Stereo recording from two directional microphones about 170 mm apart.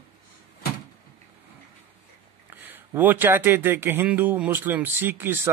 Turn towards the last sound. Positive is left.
turn(degrees=-10)  # may be behind; listen again after turning